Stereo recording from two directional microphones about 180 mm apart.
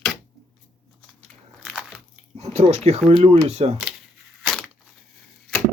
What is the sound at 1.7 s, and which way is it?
Biting, centre (ahead or behind).